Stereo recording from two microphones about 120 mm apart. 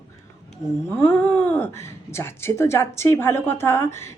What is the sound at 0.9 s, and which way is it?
Speech, 15° left (ahead or behind).